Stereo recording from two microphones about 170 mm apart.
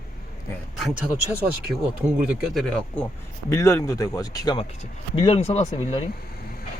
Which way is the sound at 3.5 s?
15° left (ahead or behind).